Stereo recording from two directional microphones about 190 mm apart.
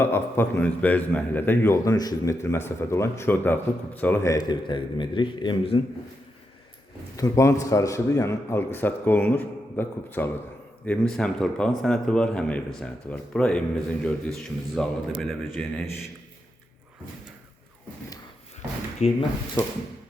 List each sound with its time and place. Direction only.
0.0 s a man's voice: 10° left (ahead or behind); by 5.8 s 25° left (ahead or behind)
7.2 s a man's voice: 15° left (ahead or behind); by 15.8 s centre (ahead or behind)
19.0 s speech: 35° left (ahead or behind)